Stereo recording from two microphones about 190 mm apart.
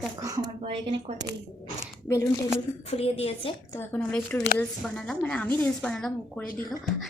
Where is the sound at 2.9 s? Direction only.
30° left (ahead or behind).